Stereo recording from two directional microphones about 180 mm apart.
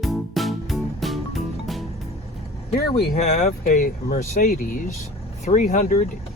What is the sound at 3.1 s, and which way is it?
Speech, 40° left (ahead or behind).